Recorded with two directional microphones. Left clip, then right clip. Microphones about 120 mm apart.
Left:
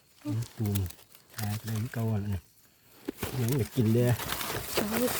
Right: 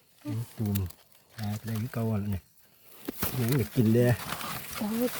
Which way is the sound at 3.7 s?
90° right.